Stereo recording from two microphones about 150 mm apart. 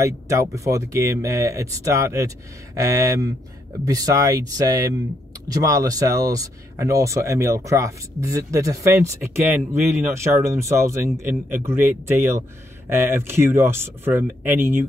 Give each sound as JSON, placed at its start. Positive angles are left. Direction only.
{"t": 0.0, "sound": "speech", "side_deg": -20}